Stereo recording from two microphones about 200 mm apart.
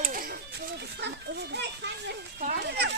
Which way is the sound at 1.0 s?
60° right (ahead or behind).